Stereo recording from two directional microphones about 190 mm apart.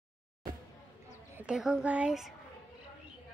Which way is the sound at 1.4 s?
5° right (ahead or behind).